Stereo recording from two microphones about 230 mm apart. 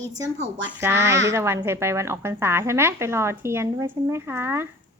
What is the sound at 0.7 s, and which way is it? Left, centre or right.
A woman's voice, centre.